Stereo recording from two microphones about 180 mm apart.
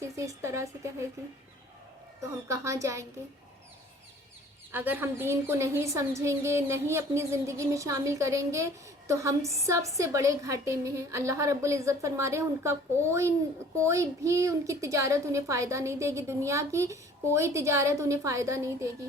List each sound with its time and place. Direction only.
0.0 s a woman's voice: 15° right (ahead or behind)
2.5 s a woman's voice: 15° right (ahead or behind)
4.7 s a woman's voice: 10° right (ahead or behind)